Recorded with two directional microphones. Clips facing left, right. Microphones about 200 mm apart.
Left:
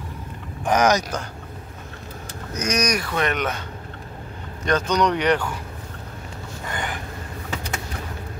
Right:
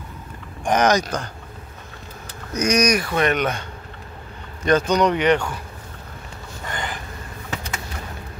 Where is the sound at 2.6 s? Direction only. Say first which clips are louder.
Right 5 dB; 10° right (ahead or behind).